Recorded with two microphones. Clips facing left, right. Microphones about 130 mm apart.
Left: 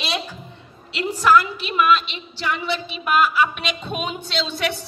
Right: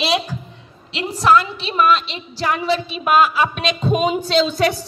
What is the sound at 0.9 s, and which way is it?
A woman's voice, 35° right (ahead or behind).